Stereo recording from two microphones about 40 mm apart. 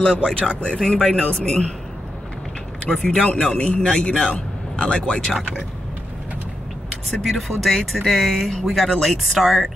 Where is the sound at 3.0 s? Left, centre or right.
Centre.